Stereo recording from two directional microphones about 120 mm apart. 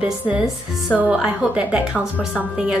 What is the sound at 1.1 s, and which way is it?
Speech, 5° right (ahead or behind).